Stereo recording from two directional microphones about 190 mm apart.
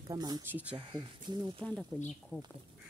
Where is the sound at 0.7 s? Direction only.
25° right (ahead or behind).